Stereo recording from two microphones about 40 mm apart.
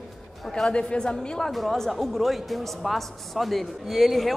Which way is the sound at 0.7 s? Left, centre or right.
Left.